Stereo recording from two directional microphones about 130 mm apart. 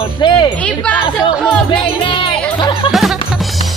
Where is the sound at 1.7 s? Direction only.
40° left (ahead or behind).